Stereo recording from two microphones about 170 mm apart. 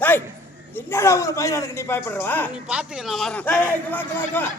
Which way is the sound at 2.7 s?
5° right (ahead or behind).